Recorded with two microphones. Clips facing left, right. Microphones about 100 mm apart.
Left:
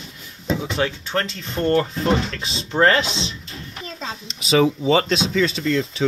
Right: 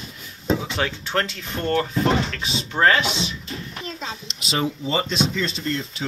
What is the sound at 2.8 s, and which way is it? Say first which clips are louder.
Speech: left 2 dB; 15° left (ahead or behind).